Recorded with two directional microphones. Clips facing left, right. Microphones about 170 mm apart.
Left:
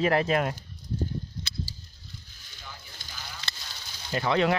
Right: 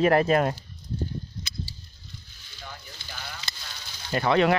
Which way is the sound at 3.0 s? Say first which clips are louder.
Right 4 dB; 40° left (ahead or behind).